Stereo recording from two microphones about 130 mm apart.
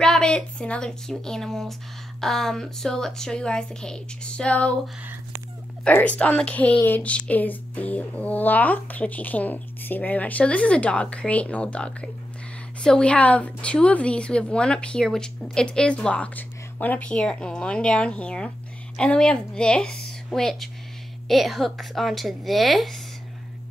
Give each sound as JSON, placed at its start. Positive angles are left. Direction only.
{"t": 0.0, "sound": "speech", "side_deg": 5}
{"t": 5.9, "sound": "speech", "side_deg": 10}